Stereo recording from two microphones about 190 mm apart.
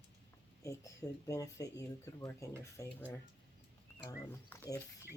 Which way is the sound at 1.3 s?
15° left (ahead or behind).